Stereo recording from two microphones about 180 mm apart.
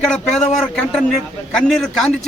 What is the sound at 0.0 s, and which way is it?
A man's voice, 5° left (ahead or behind).